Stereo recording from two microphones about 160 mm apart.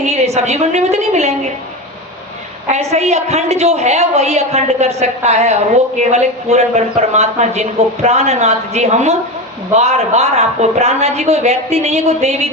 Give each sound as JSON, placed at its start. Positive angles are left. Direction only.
{"t": 0.0, "sound": "a woman's voice", "side_deg": -45}
{"t": 2.6, "sound": "a woman's voice", "side_deg": -45}